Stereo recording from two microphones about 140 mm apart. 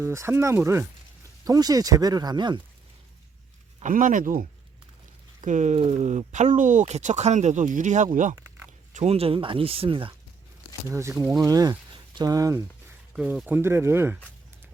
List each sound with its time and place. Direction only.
0.0 s speech: 20° right (ahead or behind)
3.8 s speech: 70° right (ahead or behind)
5.4 s speech: 60° right (ahead or behind)
8.9 s speech: 50° right (ahead or behind)
10.8 s speech: 20° right (ahead or behind)
13.1 s speech: 5° right (ahead or behind)
13.6 s speech: 20° right (ahead or behind)